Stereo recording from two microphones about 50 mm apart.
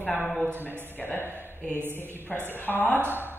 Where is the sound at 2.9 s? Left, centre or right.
Right.